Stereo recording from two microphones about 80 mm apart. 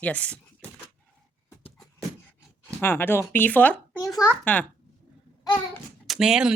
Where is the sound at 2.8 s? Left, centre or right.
Left.